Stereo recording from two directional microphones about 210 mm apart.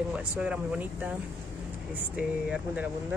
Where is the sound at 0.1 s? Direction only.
5° right (ahead or behind).